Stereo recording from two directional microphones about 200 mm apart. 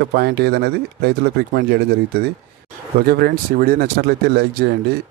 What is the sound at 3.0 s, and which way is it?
Speech, 50° right (ahead or behind).